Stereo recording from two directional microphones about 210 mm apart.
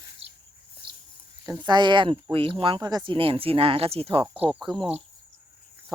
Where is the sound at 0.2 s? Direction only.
30° right (ahead or behind).